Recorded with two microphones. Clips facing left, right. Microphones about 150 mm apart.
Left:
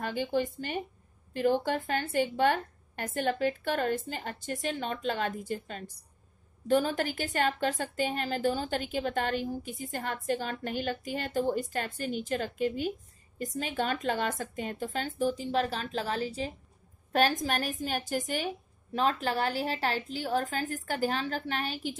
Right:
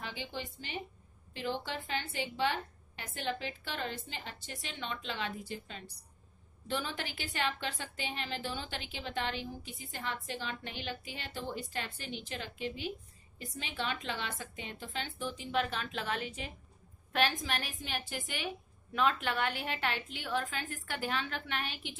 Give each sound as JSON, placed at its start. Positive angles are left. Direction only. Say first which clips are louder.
{"t": 0.0, "sound": "a woman's voice", "louder": "left 12 dB", "side_deg": 50}